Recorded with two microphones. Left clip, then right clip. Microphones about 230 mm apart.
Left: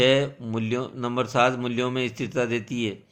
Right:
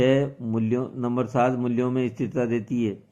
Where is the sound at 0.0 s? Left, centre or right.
Left.